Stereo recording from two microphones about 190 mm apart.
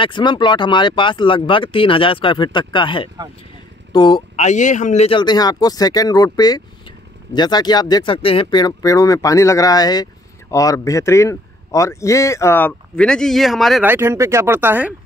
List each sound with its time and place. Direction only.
0.0 s speech: 25° left (ahead or behind)
4.4 s speech: 40° left (ahead or behind); by 13.8 s centre (ahead or behind)
13.8 s speech: 10° right (ahead or behind)